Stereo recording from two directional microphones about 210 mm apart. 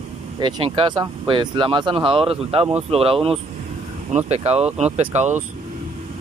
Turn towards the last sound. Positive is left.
turn(degrees=-35)  # may be behind; listen again after turning